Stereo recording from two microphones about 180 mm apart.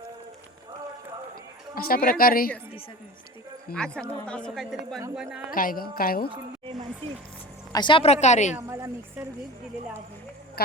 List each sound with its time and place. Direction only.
1.7 s a woman's voice: 55° left (ahead or behind)
3.8 s a woman's voice: 5° left (ahead or behind)
5.5 s a woman's voice: 50° left (ahead or behind)
6.3 s speech: 30° right (ahead or behind)
7.7 s speech: 25° left (ahead or behind); by 8.5 s 40° left (ahead or behind)
8.5 s speech: 15° right (ahead or behind)